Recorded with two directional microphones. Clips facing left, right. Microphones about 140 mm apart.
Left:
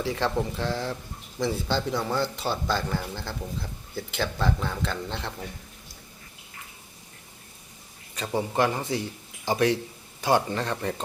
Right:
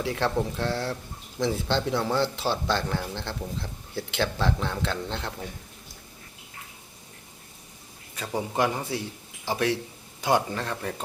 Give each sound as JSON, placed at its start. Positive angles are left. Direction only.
{"t": 0.0, "sound": "speech", "side_deg": 0}
{"t": 8.4, "sound": "speech", "side_deg": -10}
{"t": 10.2, "sound": "speech", "side_deg": -15}
{"t": 10.5, "sound": "speech", "side_deg": 0}